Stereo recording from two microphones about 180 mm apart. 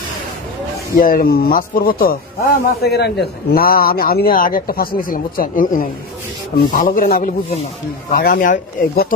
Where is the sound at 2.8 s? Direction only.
65° left (ahead or behind); by 9.1 s 45° left (ahead or behind).